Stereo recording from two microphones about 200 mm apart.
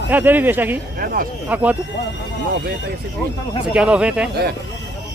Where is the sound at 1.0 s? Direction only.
45° right (ahead or behind).